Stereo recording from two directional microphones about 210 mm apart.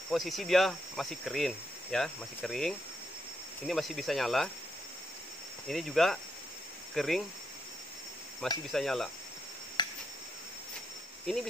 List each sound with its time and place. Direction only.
0.1 s speech: centre (ahead or behind)
5.7 s speech: centre (ahead or behind)
8.6 s speech: centre (ahead or behind)
9.8 s cricket: 20° left (ahead or behind)